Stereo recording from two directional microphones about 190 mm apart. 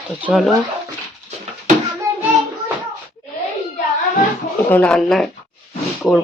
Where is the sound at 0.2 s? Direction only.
5° right (ahead or behind).